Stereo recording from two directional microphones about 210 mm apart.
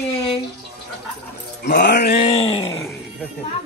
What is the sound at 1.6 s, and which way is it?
Music, 55° left (ahead or behind).